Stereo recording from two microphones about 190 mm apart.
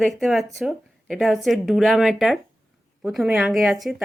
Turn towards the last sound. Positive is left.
turn(degrees=0)  # may be behind; listen again after turning